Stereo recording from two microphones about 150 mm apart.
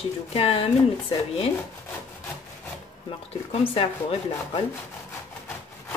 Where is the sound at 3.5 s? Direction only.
40° left (ahead or behind).